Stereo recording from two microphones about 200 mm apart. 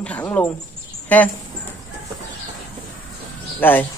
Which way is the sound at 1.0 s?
10° left (ahead or behind).